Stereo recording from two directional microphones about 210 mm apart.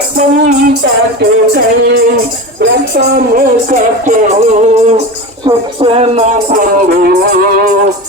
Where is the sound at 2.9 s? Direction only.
45° right (ahead or behind).